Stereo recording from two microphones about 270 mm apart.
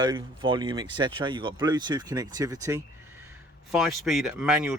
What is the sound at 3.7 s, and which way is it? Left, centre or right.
Speech, centre.